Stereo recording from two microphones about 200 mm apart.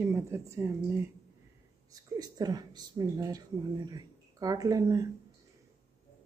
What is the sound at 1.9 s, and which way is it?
A woman's voice, 20° right (ahead or behind).